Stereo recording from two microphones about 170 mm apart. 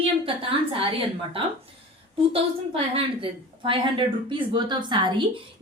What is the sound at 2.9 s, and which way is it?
Speech, 30° right (ahead or behind).